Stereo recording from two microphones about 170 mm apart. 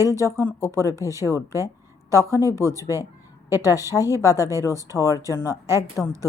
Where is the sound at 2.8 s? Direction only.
15° right (ahead or behind).